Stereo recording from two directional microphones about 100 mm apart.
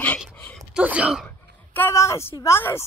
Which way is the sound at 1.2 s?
20° left (ahead or behind).